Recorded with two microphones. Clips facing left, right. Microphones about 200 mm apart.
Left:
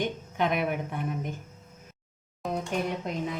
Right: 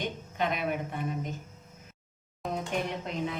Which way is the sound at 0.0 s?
55° left (ahead or behind).